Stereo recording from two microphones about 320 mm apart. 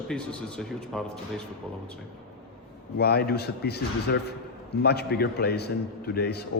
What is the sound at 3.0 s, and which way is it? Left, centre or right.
A man's voice, left.